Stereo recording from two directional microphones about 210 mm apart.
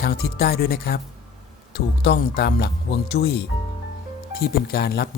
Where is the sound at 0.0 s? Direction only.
50° left (ahead or behind).